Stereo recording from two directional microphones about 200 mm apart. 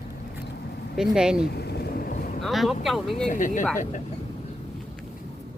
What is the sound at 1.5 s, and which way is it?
Vehicle, 55° left (ahead or behind).